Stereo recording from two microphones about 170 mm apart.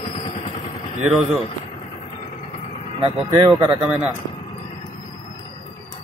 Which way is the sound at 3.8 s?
5° right (ahead or behind).